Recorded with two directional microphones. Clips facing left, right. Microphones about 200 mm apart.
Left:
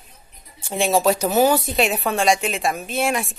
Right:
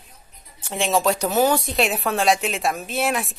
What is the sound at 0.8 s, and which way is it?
Speech, 10° left (ahead or behind).